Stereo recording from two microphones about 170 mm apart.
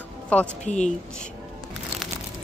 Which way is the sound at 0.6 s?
45° left (ahead or behind).